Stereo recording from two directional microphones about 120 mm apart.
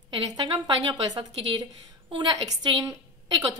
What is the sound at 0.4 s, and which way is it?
A woman's voice, 35° right (ahead or behind).